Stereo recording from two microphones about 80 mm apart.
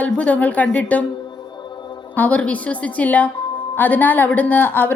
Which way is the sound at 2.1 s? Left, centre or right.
Left.